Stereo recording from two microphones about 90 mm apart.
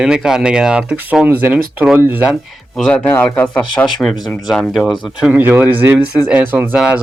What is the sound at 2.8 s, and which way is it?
Speech, 10° left (ahead or behind).